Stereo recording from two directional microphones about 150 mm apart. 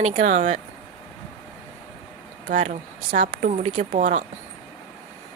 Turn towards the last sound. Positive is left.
turn(degrees=-60)  # may be behind; listen again after turning